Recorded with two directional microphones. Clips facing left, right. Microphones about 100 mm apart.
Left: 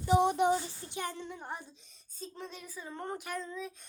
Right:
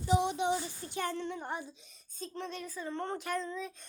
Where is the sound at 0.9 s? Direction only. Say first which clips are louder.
Right 4 dB; 15° left (ahead or behind).